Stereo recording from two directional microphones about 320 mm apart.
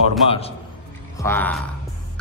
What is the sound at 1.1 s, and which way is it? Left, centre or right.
Speech, centre.